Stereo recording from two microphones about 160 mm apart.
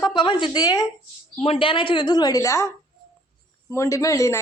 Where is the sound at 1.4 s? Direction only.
35° left (ahead or behind).